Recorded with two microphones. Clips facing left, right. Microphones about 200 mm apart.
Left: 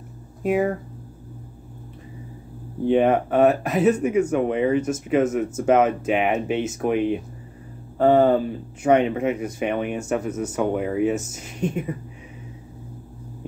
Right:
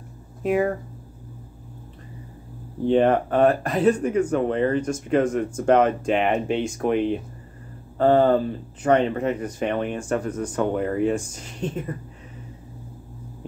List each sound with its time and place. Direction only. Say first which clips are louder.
0.4 s speech: even; centre (ahead or behind)
2.8 s speech: even; 5° left (ahead or behind)